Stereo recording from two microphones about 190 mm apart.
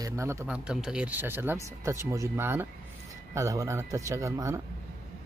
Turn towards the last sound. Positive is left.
turn(degrees=-15)  # may be behind; listen again after turning